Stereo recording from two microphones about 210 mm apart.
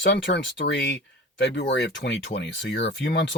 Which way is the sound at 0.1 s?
55° left (ahead or behind).